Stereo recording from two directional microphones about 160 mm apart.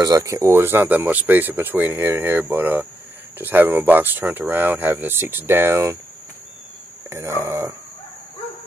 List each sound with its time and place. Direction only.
0.0 s speech: 20° right (ahead or behind)
7.1 s speech: 15° right (ahead or behind)